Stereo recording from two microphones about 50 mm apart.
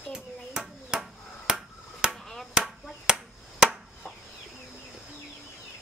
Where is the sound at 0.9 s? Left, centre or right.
Centre.